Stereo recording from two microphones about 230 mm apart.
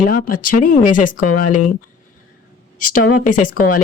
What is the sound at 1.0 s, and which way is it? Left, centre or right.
Speech, left.